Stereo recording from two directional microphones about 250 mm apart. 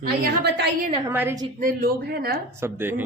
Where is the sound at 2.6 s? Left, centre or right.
Centre.